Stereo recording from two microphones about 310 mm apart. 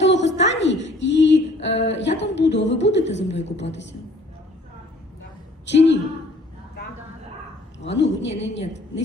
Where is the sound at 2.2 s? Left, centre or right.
Left.